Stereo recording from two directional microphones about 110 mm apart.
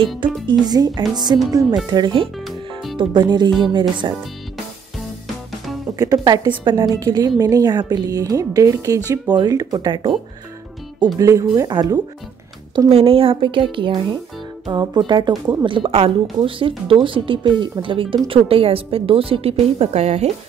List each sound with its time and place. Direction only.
0.5 s a woman's voice: 40° right (ahead or behind)
2.4 s music: centre (ahead or behind)
3.0 s speech: 45° right (ahead or behind)
5.9 s a woman's voice: 35° right (ahead or behind)
11.1 s a woman's voice: 30° right (ahead or behind)
12.9 s a woman's voice: 60° right (ahead or behind); by 20.2 s 85° right